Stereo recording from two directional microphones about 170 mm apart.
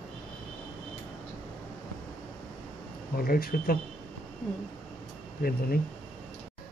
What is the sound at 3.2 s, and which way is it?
Speech, 60° left (ahead or behind).